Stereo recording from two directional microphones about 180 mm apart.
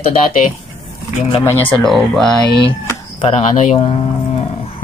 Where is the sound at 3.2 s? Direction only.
35° left (ahead or behind).